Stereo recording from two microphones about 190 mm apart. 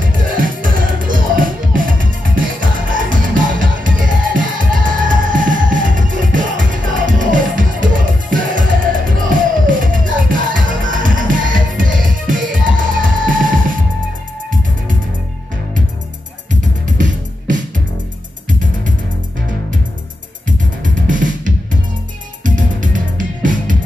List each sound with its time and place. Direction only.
0.0 s music: 45° right (ahead or behind)
16.8 s music: 40° right (ahead or behind)
20.4 s music: 45° right (ahead or behind)